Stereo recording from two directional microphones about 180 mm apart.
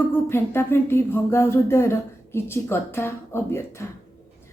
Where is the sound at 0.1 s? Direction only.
15° left (ahead or behind).